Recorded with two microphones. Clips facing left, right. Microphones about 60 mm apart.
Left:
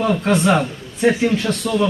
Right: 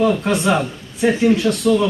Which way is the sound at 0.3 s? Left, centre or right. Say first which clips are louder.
Left 2 dB; centre.